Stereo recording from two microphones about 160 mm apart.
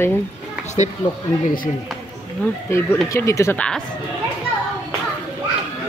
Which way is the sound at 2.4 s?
10° left (ahead or behind).